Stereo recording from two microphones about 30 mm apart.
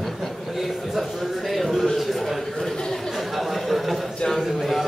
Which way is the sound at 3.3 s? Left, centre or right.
Centre.